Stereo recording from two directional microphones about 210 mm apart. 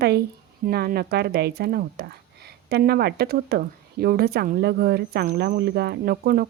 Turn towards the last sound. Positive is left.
turn(degrees=-45)  # may be behind; listen again after turning